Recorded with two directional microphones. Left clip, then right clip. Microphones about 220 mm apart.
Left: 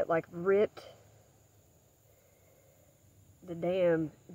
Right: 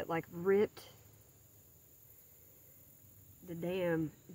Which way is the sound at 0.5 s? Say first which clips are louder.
Left 4 dB; 45° right (ahead or behind).